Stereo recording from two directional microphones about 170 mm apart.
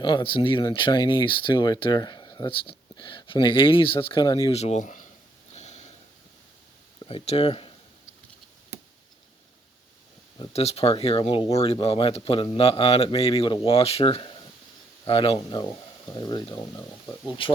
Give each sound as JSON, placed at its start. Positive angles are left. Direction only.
{"t": 0.0, "sound": "speech", "side_deg": 30}
{"t": 5.5, "sound": "sniff", "side_deg": 40}
{"t": 7.0, "sound": "speech", "side_deg": 35}
{"t": 10.3, "sound": "speech", "side_deg": 30}